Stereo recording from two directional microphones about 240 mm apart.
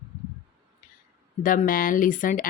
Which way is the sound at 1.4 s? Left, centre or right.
Left.